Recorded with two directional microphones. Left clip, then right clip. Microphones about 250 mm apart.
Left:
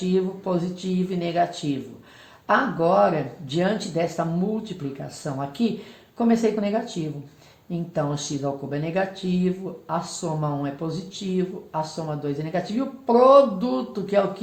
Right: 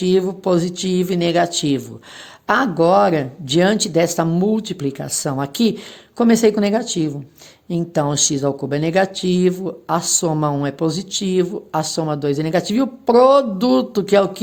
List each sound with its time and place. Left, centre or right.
0.1 s speech: right